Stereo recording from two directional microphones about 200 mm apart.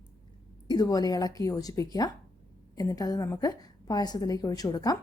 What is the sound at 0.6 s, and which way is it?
A woman's voice, 20° left (ahead or behind).